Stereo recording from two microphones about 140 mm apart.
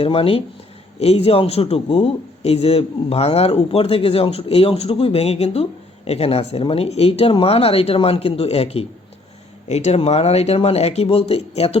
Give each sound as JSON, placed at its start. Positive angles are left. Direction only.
{"t": 0.0, "sound": "a man's voice", "side_deg": 40}